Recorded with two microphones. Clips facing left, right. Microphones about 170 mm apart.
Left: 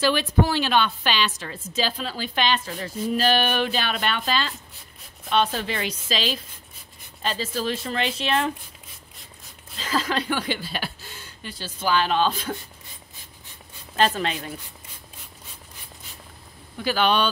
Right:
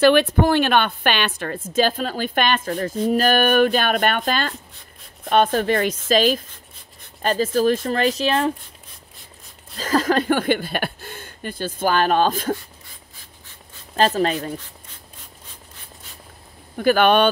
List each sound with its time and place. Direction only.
0.0 s a woman's voice: 60° right (ahead or behind); by 8.5 s 35° right (ahead or behind)
9.8 s a woman's voice: 45° right (ahead or behind)
13.9 s a woman's voice: 40° right (ahead or behind)
16.7 s speech: 55° right (ahead or behind)